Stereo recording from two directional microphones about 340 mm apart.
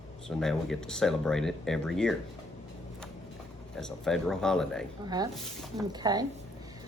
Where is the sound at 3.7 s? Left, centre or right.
Centre.